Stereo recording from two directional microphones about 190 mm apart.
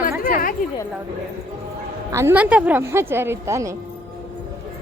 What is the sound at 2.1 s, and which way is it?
A woman's voice, 10° right (ahead or behind).